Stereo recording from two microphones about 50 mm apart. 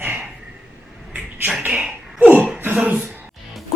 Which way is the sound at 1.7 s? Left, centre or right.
Right.